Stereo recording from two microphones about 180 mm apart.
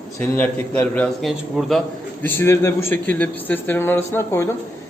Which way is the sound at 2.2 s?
15° left (ahead or behind).